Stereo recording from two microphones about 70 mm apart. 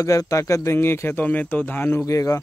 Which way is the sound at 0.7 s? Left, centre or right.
Left.